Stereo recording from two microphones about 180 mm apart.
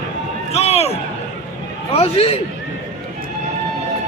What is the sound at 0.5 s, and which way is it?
Speech, 35° left (ahead or behind).